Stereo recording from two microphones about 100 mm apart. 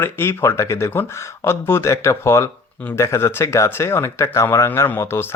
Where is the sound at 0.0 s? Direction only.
25° left (ahead or behind).